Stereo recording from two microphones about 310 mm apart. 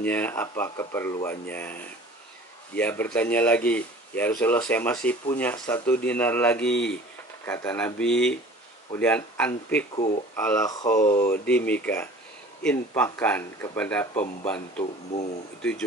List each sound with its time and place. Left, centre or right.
0.0 s speech: centre
9.9 s speech: left
10.3 s speech: centre